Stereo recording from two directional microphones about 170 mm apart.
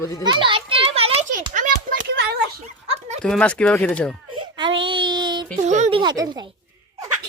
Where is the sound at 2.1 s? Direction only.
90° right.